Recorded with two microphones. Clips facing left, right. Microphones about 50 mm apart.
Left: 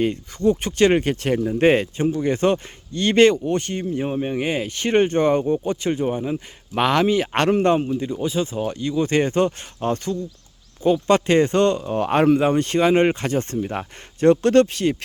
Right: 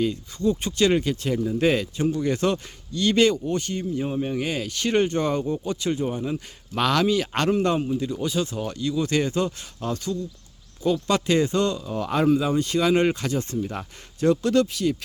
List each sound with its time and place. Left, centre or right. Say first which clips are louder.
0.0 s speech: left 4 dB; left
2.0 s speech: left 3 dB; left